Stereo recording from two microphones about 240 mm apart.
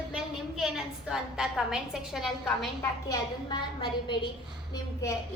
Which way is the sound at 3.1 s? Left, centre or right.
Centre.